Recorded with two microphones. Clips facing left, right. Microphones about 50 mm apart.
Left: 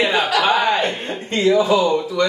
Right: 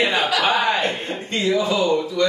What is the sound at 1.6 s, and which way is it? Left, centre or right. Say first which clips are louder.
Speech: left 3 dB; left.